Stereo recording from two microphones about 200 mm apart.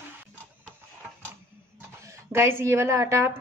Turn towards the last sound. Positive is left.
turn(degrees=-15)  # may be behind; listen again after turning